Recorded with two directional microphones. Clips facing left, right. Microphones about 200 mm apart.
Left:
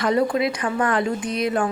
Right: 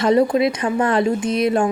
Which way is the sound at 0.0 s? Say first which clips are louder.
Right 5 dB; 25° right (ahead or behind).